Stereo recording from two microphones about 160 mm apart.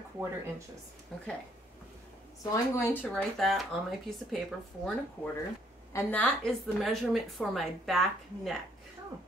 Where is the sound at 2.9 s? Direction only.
10° left (ahead or behind).